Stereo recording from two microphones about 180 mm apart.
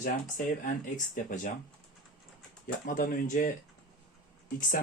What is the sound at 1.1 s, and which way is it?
Speech, 45° left (ahead or behind).